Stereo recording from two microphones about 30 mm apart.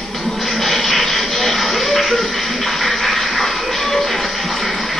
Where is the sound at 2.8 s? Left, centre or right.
Centre.